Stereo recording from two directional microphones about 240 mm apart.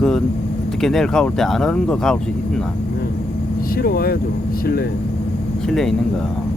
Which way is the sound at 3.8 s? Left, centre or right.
Left.